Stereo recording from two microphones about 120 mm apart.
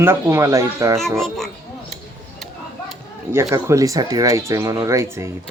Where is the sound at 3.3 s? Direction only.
25° right (ahead or behind).